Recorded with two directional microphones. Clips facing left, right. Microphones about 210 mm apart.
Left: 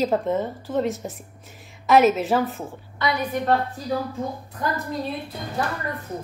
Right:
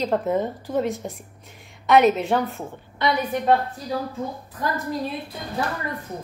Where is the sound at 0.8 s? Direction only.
Centre (ahead or behind).